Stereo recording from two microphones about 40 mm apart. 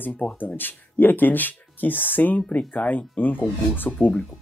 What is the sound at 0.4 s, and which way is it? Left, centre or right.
Speech, left.